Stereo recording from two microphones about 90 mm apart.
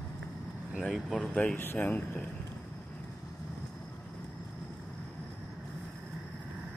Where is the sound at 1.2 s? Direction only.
10° left (ahead or behind).